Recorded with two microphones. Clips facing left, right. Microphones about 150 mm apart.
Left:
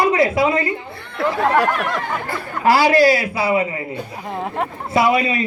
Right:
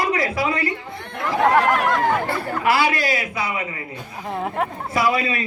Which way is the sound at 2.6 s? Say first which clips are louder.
Left 8 dB; 40° left (ahead or behind).